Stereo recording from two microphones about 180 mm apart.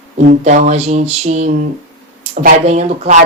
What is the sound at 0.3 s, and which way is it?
A woman's voice, 45° right (ahead or behind).